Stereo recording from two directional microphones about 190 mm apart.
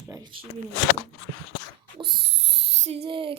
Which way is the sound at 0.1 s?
20° right (ahead or behind).